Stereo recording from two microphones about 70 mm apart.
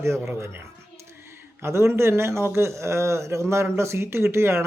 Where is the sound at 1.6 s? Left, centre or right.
Right.